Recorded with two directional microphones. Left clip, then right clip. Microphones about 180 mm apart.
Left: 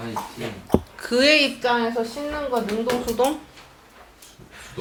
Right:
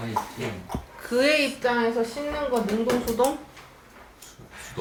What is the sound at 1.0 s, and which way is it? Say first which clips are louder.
Speech: left 3 dB; 40° left (ahead or behind).